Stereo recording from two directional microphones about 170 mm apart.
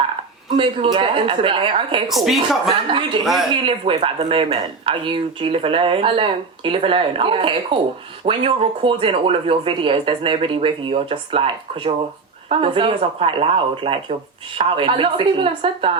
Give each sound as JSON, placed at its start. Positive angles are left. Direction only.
{"t": 0.5, "sound": "a woman's voice", "side_deg": -30}
{"t": 2.0, "sound": "a woman's voice", "side_deg": 0}
{"t": 2.6, "sound": "speech", "side_deg": -30}
{"t": 3.2, "sound": "a woman's voice", "side_deg": 0}
{"t": 3.5, "sound": "speech", "side_deg": -30}